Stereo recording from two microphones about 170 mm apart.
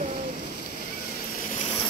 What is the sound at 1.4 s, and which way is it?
Vehicle, 45° left (ahead or behind).